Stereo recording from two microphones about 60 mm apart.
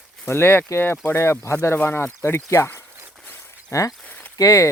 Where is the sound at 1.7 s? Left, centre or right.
Left.